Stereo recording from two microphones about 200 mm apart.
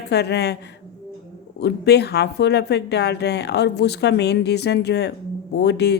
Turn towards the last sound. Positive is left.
turn(degrees=55)  # may be behind; listen again after turning